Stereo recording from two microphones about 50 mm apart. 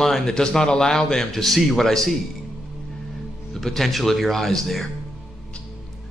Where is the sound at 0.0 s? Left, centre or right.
Centre.